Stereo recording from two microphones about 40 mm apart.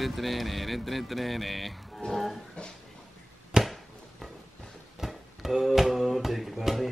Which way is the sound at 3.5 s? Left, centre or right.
Centre.